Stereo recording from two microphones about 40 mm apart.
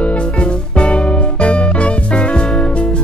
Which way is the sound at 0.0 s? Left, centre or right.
Left.